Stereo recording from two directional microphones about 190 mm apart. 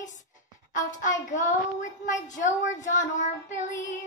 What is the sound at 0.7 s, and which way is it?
Speech, 40° left (ahead or behind).